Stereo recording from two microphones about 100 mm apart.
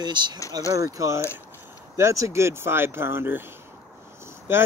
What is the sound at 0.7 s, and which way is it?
Speech, 35° right (ahead or behind).